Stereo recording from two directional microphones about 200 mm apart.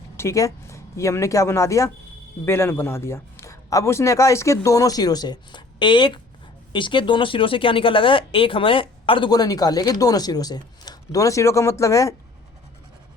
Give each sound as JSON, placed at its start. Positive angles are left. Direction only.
{"t": 0.2, "sound": "a man's voice", "side_deg": 15}